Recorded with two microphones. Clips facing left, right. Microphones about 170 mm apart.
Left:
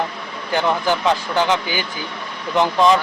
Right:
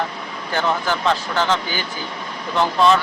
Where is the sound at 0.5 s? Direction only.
15° left (ahead or behind).